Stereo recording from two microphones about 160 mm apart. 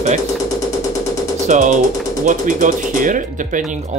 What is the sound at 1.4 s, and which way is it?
Speech, 50° right (ahead or behind).